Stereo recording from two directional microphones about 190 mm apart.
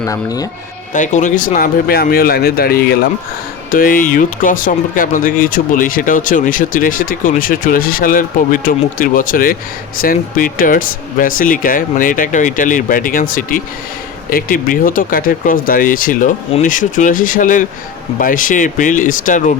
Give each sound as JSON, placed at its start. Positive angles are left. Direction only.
{"t": 0.0, "sound": "speech", "side_deg": 20}
{"t": 0.9, "sound": "speech", "side_deg": 40}